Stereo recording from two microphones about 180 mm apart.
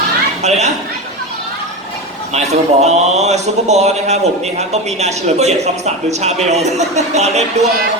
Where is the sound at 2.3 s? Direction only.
40° right (ahead or behind).